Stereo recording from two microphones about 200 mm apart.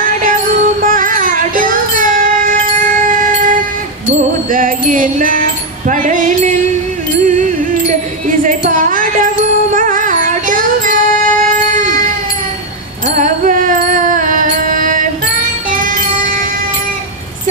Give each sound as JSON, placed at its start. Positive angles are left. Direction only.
{"t": 0.0, "sound": "music", "side_deg": -40}
{"t": 4.5, "sound": "a sound", "side_deg": -40}
{"t": 7.2, "sound": "music", "side_deg": -40}
{"t": 8.3, "sound": "wind chime", "side_deg": -40}
{"t": 9.8, "sound": "music", "side_deg": -40}
{"t": 13.2, "sound": "mantra", "side_deg": -40}